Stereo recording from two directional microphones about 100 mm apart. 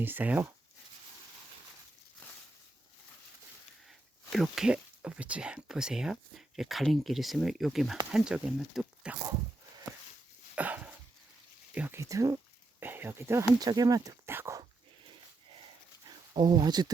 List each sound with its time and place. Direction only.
0.0 s speech: 20° right (ahead or behind)
3.8 s speech: 5° right (ahead or behind)
10.5 s dog: 15° right (ahead or behind)
11.7 s speech: 15° right (ahead or behind)
11.9 s speech: 30° right (ahead or behind)
12.8 s a sound: 20° right (ahead or behind)
13.6 s speech: 40° right (ahead or behind)
14.3 s dog: 25° right (ahead or behind)
16.0 s a sound: 45° right (ahead or behind)